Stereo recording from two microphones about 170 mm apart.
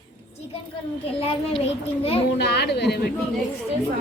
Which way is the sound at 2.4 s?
75° left (ahead or behind).